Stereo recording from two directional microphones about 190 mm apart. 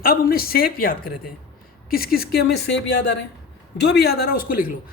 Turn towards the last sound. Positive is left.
turn(degrees=50)  # may be behind; listen again after turning